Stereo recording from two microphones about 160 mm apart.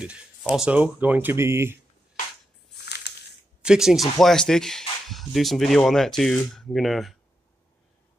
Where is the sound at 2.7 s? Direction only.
90° left.